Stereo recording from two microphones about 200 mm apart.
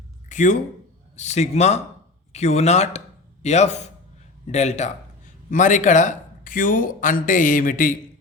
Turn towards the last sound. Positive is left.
turn(degrees=40)  # may be behind; listen again after turning